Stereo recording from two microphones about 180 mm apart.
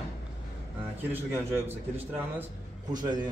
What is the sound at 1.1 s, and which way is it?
Speech, 10° right (ahead or behind).